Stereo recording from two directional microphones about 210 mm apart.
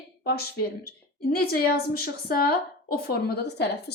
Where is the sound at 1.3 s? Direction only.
45° left (ahead or behind).